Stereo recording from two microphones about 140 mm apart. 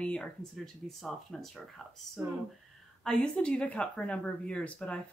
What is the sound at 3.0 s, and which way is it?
Speech, 5° left (ahead or behind).